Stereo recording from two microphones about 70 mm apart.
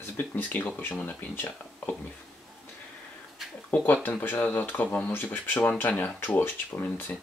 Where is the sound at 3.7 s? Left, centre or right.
Left.